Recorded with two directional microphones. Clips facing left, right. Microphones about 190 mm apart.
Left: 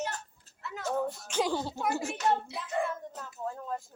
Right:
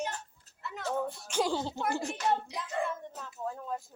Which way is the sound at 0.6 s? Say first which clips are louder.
Left 1 dB; 5° left (ahead or behind).